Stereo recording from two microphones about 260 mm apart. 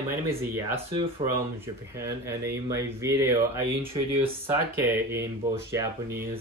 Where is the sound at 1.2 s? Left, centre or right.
Right.